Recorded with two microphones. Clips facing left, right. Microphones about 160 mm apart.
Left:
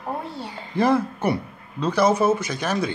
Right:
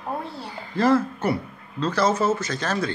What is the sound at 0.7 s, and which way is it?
Speech, 15° left (ahead or behind).